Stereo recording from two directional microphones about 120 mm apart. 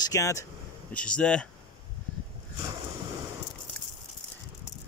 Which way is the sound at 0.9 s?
10° left (ahead or behind).